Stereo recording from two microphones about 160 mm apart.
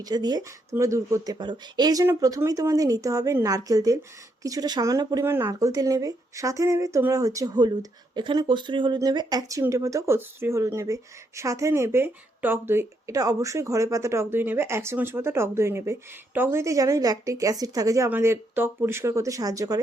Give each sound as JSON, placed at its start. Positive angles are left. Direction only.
{"t": 0.0, "sound": "speech", "side_deg": -25}